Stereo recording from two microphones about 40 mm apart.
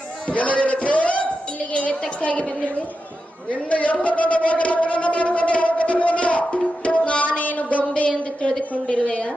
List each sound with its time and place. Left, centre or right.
0.3 s music: left
1.7 s a woman's voice: left
6.8 s music: left
8.7 s a woman's voice: left